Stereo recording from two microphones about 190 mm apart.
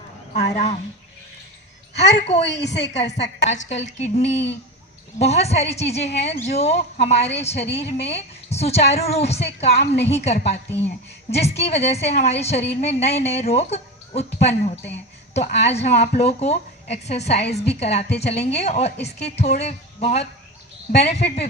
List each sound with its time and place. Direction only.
0.3 s a woman's voice: 35° left (ahead or behind)
1.9 s a woman's voice: 60° left (ahead or behind)
3.4 s a woman's voice: 40° left (ahead or behind)